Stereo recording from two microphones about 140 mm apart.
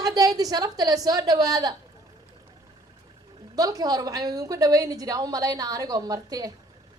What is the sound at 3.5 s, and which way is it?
A woman's voice, 25° right (ahead or behind).